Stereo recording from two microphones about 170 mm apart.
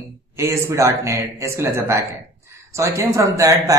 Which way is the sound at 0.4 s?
15° right (ahead or behind).